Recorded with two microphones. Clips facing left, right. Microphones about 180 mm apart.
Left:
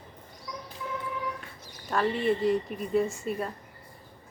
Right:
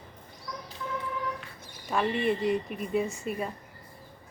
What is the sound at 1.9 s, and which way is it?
Speech, 5° right (ahead or behind).